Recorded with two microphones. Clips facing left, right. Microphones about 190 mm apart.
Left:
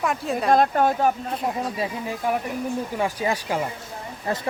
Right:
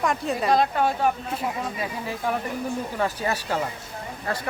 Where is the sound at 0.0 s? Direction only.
Centre (ahead or behind).